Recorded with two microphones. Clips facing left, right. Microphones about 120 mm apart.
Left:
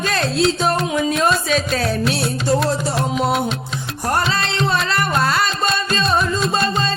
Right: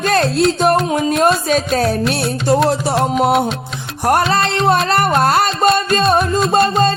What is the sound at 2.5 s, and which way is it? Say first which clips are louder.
Music: right 4 dB; 60° right (ahead or behind).